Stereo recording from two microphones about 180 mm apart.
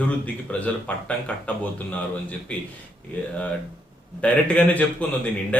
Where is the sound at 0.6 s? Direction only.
10° left (ahead or behind).